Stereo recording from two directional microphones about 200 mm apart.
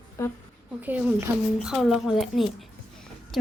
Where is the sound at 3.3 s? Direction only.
Centre (ahead or behind).